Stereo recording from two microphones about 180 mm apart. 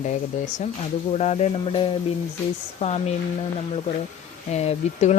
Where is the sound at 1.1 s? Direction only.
35° left (ahead or behind).